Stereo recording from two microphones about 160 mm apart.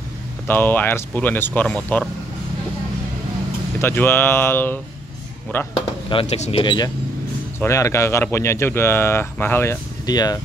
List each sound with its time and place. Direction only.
0.5 s speech: 10° left (ahead or behind)
3.8 s speech: 15° left (ahead or behind)
6.0 s speech: 40° left (ahead or behind)
6.6 s speech: 30° left (ahead or behind)
7.5 s speech: 15° left (ahead or behind)